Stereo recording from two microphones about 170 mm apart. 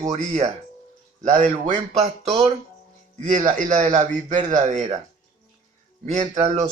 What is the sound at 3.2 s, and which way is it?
Speech, 50° right (ahead or behind).